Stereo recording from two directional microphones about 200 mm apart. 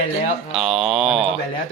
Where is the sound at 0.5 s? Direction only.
Centre (ahead or behind).